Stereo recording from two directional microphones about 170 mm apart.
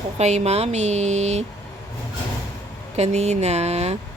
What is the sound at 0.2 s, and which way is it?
A woman's voice, 40° right (ahead or behind).